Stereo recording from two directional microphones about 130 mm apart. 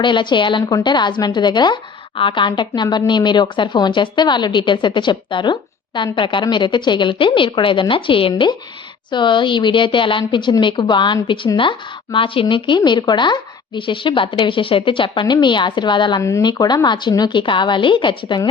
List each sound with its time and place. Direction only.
0.0 s a woman's voice: 35° left (ahead or behind)
16.2 s a woman's voice: 25° left (ahead or behind)